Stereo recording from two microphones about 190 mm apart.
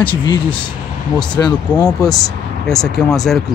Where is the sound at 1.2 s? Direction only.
20° left (ahead or behind).